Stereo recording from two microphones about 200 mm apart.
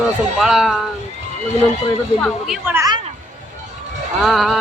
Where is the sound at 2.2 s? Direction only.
Centre (ahead or behind).